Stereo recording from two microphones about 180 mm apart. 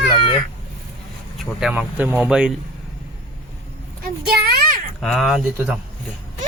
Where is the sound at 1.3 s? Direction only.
5° right (ahead or behind).